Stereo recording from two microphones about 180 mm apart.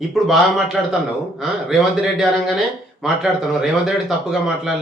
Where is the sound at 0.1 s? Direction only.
Centre (ahead or behind).